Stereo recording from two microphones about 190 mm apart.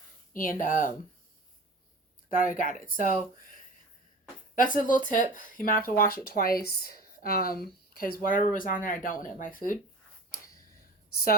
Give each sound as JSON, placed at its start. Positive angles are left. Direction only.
{"t": 0.3, "sound": "speech", "side_deg": 45}
{"t": 2.3, "sound": "speech", "side_deg": 45}
{"t": 3.3, "sound": "a sound", "side_deg": 45}
{"t": 4.5, "sound": "speech", "side_deg": 45}